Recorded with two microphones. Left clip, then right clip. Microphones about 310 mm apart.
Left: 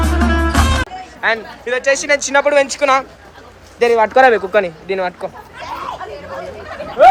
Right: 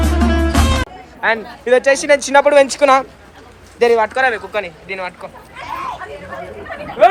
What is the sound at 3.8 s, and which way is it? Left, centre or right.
Speech, centre.